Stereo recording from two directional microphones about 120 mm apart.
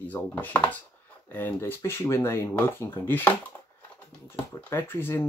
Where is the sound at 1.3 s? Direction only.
15° left (ahead or behind).